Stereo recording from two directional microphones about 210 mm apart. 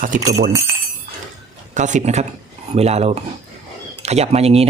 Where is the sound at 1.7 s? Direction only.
35° right (ahead or behind).